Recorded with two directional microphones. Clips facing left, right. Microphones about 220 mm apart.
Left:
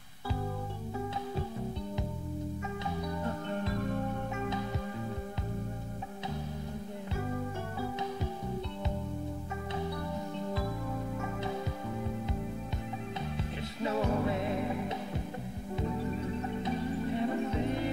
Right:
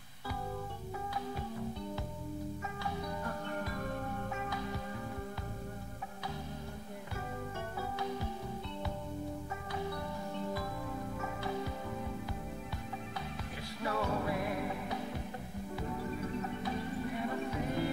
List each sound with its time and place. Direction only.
13.4 s music: 20° left (ahead or behind)
16.6 s music: 25° left (ahead or behind)